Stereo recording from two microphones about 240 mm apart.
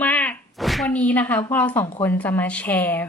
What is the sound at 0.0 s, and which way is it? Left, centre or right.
A woman's voice, centre.